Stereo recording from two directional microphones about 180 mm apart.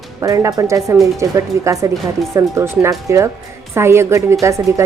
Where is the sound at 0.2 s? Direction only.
20° right (ahead or behind).